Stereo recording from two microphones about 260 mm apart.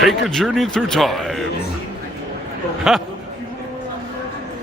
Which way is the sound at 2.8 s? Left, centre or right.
Centre.